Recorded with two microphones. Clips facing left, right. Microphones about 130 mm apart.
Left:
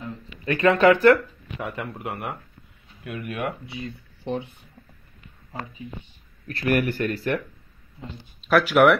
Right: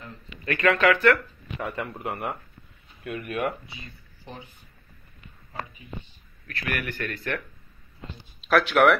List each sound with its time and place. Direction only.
0.5 s speech: 30° left (ahead or behind)
1.6 s speech: centre (ahead or behind)
3.7 s speech: 65° left (ahead or behind)
6.4 s speech: 40° left (ahead or behind)
8.5 s speech: 5° left (ahead or behind)